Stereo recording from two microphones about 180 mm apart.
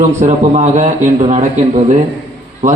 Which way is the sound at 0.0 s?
40° right (ahead or behind).